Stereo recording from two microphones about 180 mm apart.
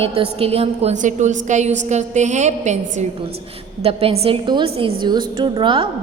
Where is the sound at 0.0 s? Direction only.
30° right (ahead or behind).